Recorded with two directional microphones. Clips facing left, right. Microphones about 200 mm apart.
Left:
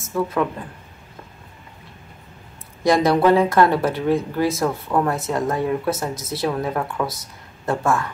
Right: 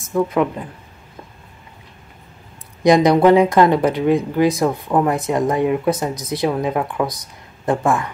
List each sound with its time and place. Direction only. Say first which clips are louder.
0.0 s speech: right 4 dB; 15° right (ahead or behind)
2.8 s speech: right 4 dB; 15° right (ahead or behind)